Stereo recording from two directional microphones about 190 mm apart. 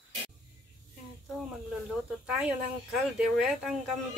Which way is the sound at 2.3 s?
5° right (ahead or behind).